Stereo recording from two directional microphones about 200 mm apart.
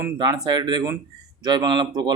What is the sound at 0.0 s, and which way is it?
Speech, 20° right (ahead or behind).